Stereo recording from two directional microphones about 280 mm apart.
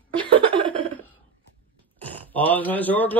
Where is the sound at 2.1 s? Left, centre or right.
Centre.